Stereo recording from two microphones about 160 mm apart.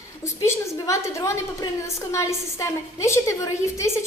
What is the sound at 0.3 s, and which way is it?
A woman's voice, 20° left (ahead or behind).